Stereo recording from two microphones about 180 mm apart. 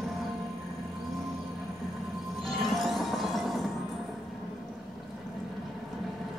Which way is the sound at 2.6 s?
Centre (ahead or behind).